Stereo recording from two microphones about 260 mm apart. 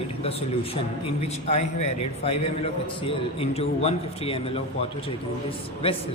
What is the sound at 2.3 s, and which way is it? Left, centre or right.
A man's voice, left.